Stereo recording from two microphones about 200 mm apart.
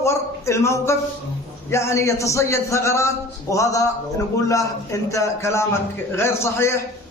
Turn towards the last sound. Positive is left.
turn(degrees=15)  # may be behind; listen again after turning